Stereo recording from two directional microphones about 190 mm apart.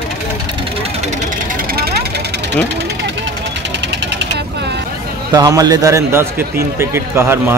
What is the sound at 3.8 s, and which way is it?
Vehicle, 65° right (ahead or behind).